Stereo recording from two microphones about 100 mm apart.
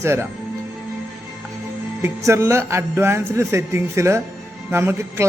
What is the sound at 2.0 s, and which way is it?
A man's voice, 25° right (ahead or behind).